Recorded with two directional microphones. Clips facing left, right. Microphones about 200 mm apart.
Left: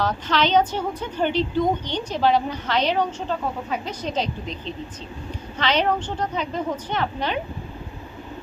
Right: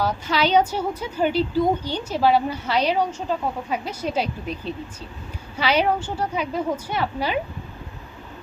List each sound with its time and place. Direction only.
0.0 s a woman's voice: 10° right (ahead or behind)